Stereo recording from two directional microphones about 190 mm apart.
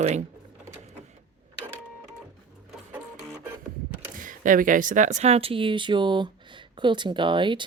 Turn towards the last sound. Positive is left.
turn(degrees=-25)  # may be behind; listen again after turning